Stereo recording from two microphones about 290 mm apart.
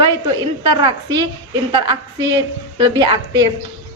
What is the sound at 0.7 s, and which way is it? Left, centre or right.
Speech, centre.